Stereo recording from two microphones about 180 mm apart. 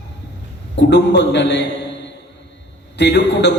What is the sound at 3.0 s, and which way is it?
Speech, 70° left (ahead or behind).